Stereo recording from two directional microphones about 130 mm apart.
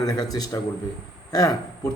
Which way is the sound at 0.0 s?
30° left (ahead or behind).